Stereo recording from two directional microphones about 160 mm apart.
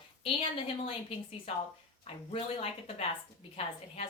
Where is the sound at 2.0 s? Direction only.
35° left (ahead or behind).